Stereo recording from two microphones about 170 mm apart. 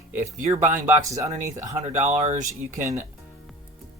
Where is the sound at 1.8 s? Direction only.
45° right (ahead or behind).